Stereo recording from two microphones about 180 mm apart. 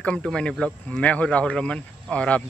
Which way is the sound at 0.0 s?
5° left (ahead or behind).